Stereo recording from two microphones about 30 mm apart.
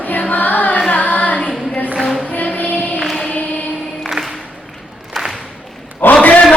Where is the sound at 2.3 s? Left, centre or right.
Left.